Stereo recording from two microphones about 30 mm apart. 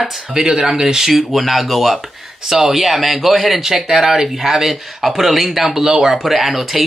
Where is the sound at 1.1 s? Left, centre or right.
Centre.